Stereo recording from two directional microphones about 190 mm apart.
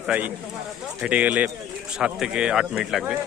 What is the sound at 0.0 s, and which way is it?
Speech, 5° right (ahead or behind).